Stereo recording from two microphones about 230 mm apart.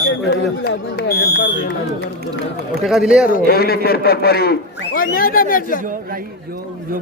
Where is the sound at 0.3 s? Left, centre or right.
Left.